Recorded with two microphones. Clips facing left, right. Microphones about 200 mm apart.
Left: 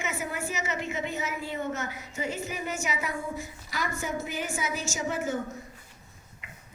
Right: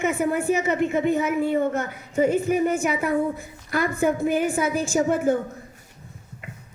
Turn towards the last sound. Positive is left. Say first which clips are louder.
# right 10 dB
turn(degrees=-55)  # may be behind; listen again after turning